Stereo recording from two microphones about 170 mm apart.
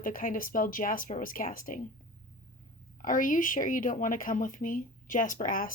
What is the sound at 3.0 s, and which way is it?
Speech, 50° left (ahead or behind).